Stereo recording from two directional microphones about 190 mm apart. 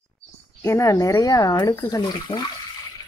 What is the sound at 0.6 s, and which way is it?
Speech, 15° left (ahead or behind).